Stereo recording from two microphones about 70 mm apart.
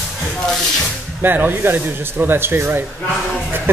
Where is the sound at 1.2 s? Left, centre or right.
Right.